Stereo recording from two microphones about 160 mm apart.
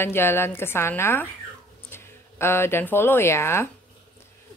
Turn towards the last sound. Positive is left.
turn(degrees=15)  # may be behind; listen again after turning